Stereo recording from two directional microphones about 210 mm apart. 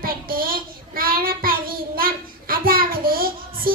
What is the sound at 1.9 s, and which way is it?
Child singing, 45° right (ahead or behind).